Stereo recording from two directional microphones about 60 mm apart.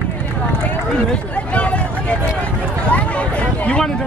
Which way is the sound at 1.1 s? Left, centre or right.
Left.